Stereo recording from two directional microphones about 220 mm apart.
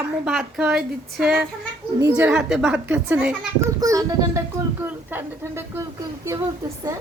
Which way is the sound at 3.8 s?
15° right (ahead or behind).